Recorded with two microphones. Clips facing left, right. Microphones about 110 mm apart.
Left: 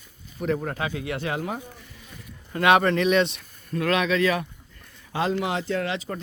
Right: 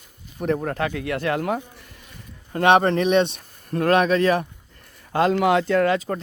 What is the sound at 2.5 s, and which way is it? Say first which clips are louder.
Speech: right 3 dB; 35° right (ahead or behind).